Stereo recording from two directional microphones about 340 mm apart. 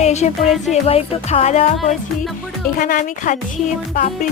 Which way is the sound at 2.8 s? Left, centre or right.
Left.